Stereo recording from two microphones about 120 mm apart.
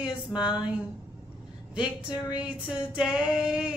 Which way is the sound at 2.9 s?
10° right (ahead or behind).